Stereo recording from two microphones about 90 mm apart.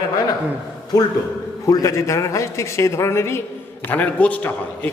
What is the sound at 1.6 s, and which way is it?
A man's voice, 40° left (ahead or behind).